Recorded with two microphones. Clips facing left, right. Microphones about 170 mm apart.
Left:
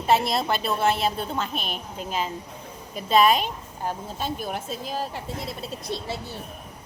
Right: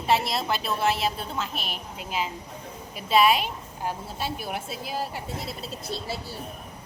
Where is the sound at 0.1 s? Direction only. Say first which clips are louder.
Left 3 dB; centre (ahead or behind).